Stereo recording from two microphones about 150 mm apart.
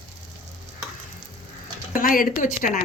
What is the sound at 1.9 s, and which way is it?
Speech, 65° left (ahead or behind).